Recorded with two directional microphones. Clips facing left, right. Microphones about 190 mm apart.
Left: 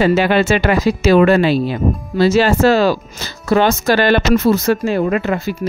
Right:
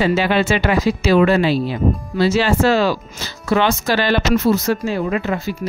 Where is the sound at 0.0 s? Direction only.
50° left (ahead or behind).